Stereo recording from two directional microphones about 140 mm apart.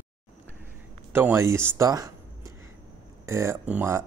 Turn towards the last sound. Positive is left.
turn(degrees=-15)  # may be behind; listen again after turning